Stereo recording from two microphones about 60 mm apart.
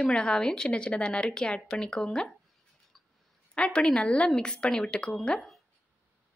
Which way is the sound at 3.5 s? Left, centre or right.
Centre.